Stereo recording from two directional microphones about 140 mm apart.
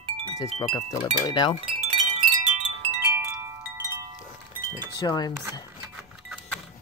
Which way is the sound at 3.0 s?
20° right (ahead or behind).